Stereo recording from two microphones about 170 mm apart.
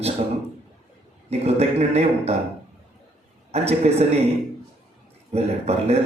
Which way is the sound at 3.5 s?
40° right (ahead or behind).